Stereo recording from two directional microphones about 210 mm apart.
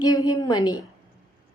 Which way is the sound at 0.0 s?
15° left (ahead or behind).